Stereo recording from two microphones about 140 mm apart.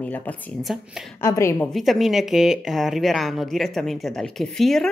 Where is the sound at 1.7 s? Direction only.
Centre (ahead or behind).